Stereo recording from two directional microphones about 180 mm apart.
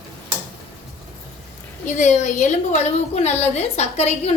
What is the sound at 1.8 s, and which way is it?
A woman's voice, 40° left (ahead or behind).